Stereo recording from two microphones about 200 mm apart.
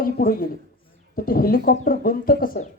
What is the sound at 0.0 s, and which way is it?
A man's voice, 45° left (ahead or behind).